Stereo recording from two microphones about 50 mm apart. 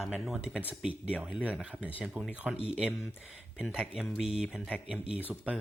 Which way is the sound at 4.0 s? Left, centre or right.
Centre.